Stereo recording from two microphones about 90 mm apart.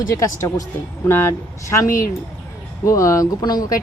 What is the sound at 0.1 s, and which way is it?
Speech, 35° left (ahead or behind).